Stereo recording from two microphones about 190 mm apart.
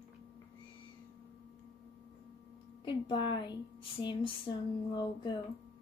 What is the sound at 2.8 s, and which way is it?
Speech, 25° left (ahead or behind).